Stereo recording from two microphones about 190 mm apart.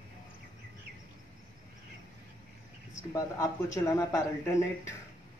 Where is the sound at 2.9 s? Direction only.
15° left (ahead or behind).